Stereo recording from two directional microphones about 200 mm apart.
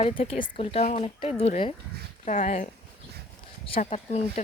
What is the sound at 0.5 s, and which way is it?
Speech, 30° left (ahead or behind).